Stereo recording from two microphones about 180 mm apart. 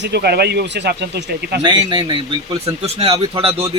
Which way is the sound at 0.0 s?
65° right (ahead or behind).